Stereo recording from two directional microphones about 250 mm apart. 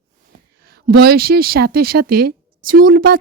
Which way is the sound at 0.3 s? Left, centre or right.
Right.